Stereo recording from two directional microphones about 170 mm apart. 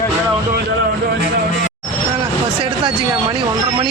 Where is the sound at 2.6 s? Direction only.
30° right (ahead or behind).